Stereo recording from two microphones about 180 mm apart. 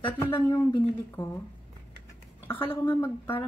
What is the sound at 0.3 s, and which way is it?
A woman's voice, 15° left (ahead or behind).